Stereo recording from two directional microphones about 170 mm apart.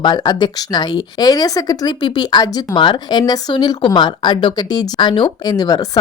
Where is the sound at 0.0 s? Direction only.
25° left (ahead or behind).